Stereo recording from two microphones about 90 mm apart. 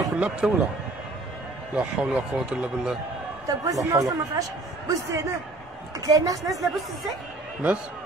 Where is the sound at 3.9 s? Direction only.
40° right (ahead or behind).